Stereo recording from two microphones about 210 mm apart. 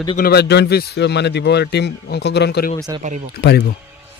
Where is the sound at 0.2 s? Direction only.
50° left (ahead or behind).